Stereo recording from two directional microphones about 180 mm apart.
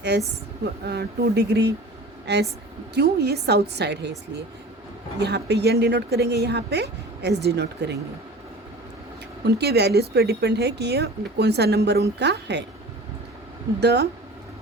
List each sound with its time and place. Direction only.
0.1 s a woman's voice: 70° right (ahead or behind)
5.2 s a woman's voice: 70° right (ahead or behind)
9.5 s a woman's voice: 65° right (ahead or behind)
13.7 s a woman's voice: 70° right (ahead or behind)